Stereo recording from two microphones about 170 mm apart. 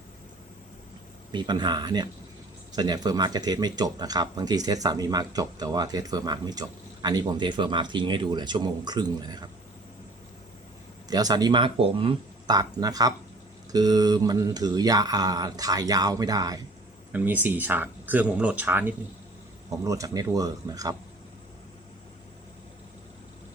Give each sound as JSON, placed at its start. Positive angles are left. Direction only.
{"t": 1.3, "sound": "speech", "side_deg": -25}
{"t": 11.1, "sound": "speech", "side_deg": -20}
{"t": 17.1, "sound": "speech", "side_deg": -10}